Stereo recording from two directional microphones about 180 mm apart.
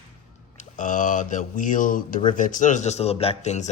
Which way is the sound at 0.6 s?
45° left (ahead or behind).